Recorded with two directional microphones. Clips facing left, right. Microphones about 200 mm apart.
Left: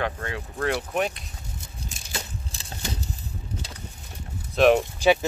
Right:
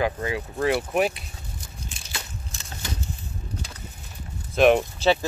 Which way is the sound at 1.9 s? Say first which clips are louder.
Left 4 dB; 40° left (ahead or behind).